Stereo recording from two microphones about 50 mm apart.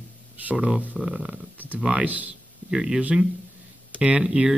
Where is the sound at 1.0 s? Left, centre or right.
Centre.